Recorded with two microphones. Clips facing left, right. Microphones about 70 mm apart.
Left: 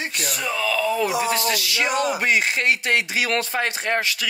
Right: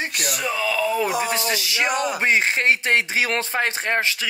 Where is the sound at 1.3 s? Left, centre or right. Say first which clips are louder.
Left 1 dB; right.